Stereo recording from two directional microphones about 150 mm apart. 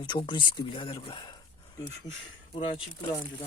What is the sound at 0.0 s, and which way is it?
Speech, 30° left (ahead or behind).